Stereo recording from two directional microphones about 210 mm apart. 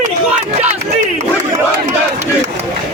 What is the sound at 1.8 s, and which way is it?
Speech, 30° right (ahead or behind).